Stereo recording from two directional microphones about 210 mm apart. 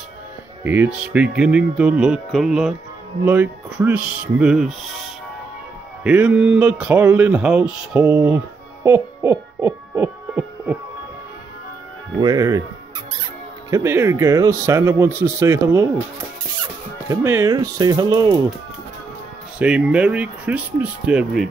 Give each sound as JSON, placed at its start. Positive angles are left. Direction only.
{"t": 0.7, "sound": "speech", "side_deg": -5}
{"t": 8.8, "sound": "hoot", "side_deg": -10}
{"t": 12.2, "sound": "speech", "side_deg": -15}
{"t": 13.7, "sound": "speech", "side_deg": -15}
{"t": 17.1, "sound": "speech", "side_deg": -15}
{"t": 19.6, "sound": "speech", "side_deg": -5}